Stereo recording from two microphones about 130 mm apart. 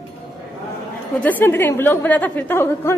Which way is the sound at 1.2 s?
15° left (ahead or behind).